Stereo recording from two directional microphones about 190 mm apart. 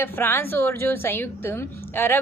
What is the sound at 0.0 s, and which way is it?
A woman's voice, 10° left (ahead or behind).